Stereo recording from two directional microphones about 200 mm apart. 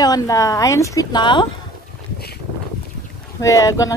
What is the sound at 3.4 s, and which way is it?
Speech, 15° left (ahead or behind).